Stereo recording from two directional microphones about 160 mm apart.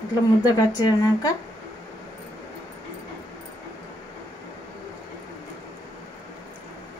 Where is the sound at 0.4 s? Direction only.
25° left (ahead or behind).